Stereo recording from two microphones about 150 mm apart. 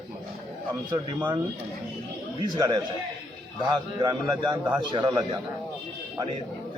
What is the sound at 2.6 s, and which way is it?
Speech, 25° right (ahead or behind).